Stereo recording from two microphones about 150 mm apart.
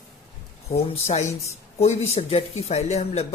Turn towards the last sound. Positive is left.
turn(degrees=45)  # may be behind; listen again after turning